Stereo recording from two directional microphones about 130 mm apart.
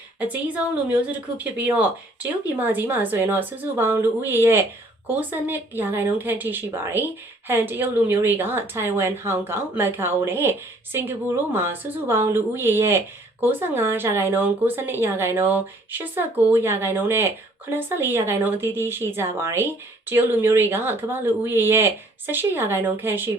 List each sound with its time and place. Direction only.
0.2 s speech: 10° right (ahead or behind)